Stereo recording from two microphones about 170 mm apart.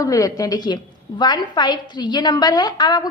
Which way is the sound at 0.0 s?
20° left (ahead or behind).